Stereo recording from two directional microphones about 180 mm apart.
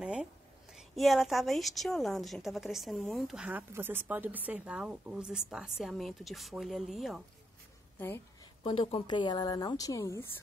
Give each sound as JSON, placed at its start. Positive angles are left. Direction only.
{"t": 0.0, "sound": "a sound", "side_deg": -5}
{"t": 0.7, "sound": "a woman's voice", "side_deg": 0}
{"t": 8.6, "sound": "a woman's voice", "side_deg": 30}